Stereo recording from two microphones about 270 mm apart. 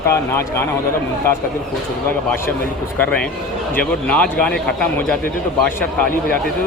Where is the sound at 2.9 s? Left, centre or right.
Centre.